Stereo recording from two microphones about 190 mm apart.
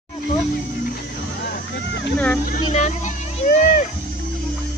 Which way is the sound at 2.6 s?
35° left (ahead or behind).